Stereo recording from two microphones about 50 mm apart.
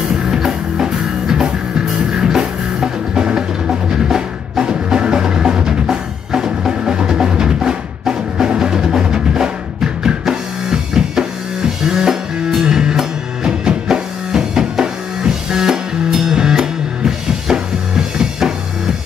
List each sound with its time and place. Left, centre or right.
0.1 s music: centre
10.0 s drum kit: centre
11.8 s music: centre